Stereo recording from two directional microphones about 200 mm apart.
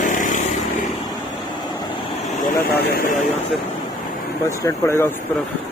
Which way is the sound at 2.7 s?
50° left (ahead or behind).